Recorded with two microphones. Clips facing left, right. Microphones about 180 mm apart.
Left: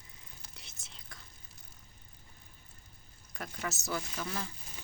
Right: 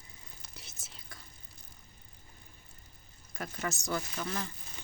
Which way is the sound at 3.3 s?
Centre (ahead or behind).